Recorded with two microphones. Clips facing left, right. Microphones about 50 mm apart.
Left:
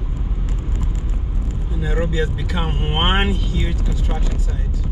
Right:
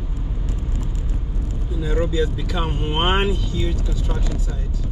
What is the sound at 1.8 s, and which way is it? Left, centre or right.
Speech, left.